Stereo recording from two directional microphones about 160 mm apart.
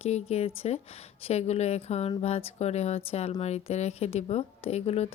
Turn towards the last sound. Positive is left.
turn(degrees=40)  # may be behind; listen again after turning